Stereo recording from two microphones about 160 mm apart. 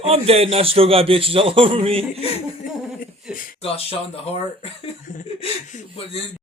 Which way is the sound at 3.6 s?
40° left (ahead or behind).